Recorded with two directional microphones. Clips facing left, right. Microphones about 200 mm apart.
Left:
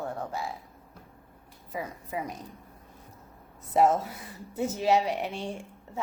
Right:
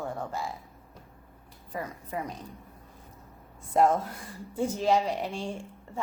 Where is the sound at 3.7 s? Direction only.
5° left (ahead or behind).